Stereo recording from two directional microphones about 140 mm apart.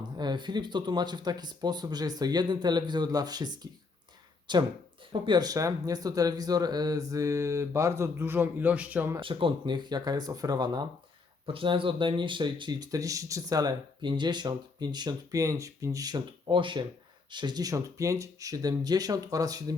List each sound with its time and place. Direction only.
0.2 s speech: 30° right (ahead or behind); by 9.1 s 10° right (ahead or behind)
9.2 s speech: 35° right (ahead or behind)